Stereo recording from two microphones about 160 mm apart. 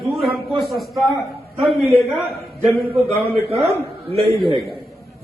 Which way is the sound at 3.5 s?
40° right (ahead or behind).